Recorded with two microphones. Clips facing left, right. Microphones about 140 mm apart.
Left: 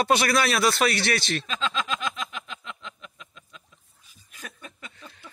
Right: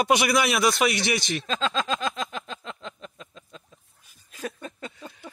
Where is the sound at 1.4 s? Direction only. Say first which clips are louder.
Right 3 dB; 35° right (ahead or behind).